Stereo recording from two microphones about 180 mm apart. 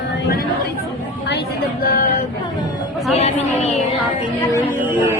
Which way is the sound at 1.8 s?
55° left (ahead or behind).